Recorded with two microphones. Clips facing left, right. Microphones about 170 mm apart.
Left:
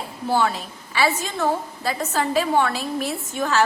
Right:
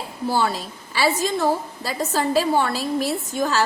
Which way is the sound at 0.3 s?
35° right (ahead or behind).